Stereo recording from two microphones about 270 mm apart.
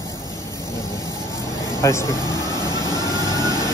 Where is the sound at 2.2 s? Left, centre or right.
Centre.